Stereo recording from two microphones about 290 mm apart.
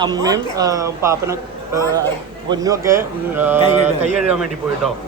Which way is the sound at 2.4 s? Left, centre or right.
Centre.